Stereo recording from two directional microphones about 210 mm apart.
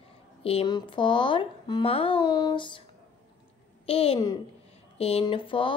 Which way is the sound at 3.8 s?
30° left (ahead or behind).